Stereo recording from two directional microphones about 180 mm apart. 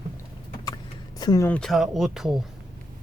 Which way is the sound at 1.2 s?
20° left (ahead or behind).